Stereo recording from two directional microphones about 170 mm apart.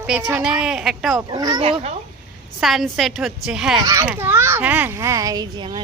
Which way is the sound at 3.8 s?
20° right (ahead or behind).